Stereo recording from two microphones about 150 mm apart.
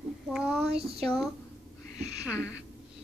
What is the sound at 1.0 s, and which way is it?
Speech, 5° left (ahead or behind).